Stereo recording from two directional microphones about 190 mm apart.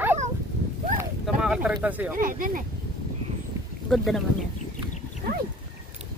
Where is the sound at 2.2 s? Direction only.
45° right (ahead or behind).